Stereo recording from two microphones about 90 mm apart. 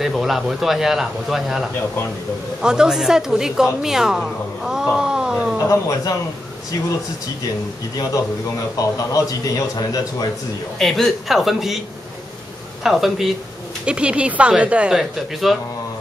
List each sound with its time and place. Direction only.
0.0 s a woman's voice: centre (ahead or behind)
4.9 s a sound: 10° right (ahead or behind)
5.7 s a man's voice: 40° left (ahead or behind)
8.7 s a man's voice: 40° left (ahead or behind)
10.8 s a woman's voice: 5° left (ahead or behind)
12.8 s a woman's voice: 5° right (ahead or behind)